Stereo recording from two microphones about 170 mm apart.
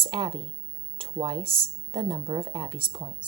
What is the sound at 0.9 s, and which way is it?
A woman's voice, 30° right (ahead or behind).